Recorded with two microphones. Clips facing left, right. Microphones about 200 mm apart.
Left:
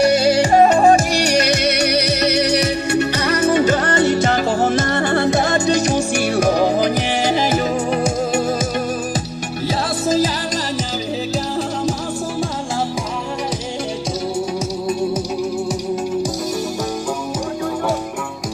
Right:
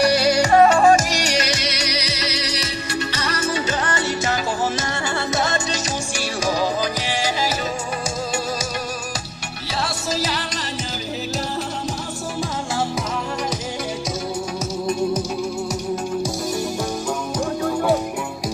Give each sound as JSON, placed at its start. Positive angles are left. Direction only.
{"t": 0.0, "sound": "music", "side_deg": 25}
{"t": 1.9, "sound": "music", "side_deg": 60}